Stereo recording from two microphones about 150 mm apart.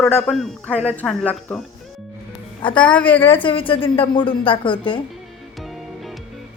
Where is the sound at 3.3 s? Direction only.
35° left (ahead or behind).